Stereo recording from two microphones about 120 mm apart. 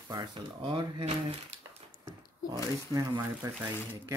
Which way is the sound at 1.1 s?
55° right (ahead or behind).